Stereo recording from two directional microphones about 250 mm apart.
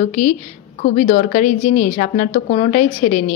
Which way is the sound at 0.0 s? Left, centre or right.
Left.